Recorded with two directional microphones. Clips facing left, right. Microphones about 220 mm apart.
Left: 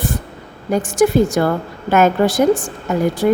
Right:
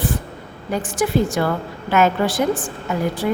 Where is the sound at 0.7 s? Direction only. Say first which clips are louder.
Left 6 dB; 45° left (ahead or behind).